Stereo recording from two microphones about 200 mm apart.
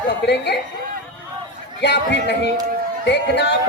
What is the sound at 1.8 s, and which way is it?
A man's voice, 55° left (ahead or behind).